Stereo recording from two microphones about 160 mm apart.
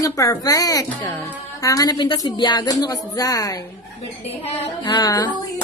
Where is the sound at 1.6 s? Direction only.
20° left (ahead or behind).